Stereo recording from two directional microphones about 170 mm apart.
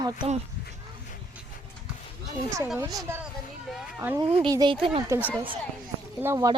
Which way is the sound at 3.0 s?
15° right (ahead or behind).